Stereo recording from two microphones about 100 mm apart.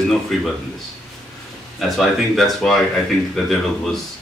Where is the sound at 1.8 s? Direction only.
Centre (ahead or behind).